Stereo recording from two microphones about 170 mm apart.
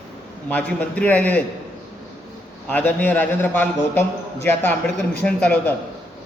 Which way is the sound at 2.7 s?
10° left (ahead or behind).